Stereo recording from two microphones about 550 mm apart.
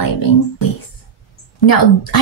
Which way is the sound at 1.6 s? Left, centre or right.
Left.